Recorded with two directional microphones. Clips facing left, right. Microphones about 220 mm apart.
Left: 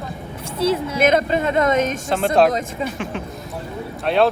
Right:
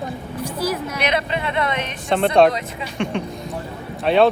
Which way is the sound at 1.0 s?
45° left (ahead or behind).